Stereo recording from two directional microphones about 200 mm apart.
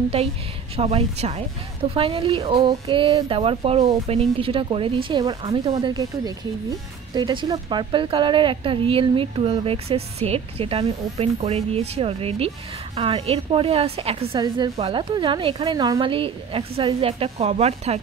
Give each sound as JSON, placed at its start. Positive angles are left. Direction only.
{"t": 0.7, "sound": "a woman's voice", "side_deg": -30}